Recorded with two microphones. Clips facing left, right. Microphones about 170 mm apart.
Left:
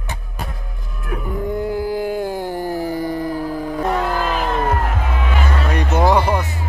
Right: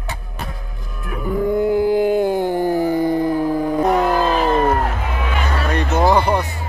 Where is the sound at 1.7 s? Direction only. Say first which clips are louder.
Right 6 dB; 20° right (ahead or behind).